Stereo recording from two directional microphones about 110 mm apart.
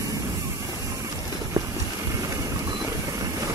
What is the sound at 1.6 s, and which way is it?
Clip-clop, 35° right (ahead or behind).